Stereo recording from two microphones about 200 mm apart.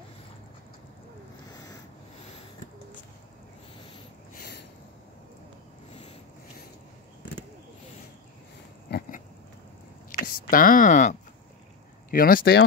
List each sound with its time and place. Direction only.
1.5 s a sound: 20° left (ahead or behind)
8.9 s pig: 55° left (ahead or behind)
10.2 s speech: 45° left (ahead or behind)